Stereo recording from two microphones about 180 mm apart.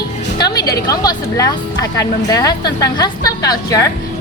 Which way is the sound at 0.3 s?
20° left (ahead or behind).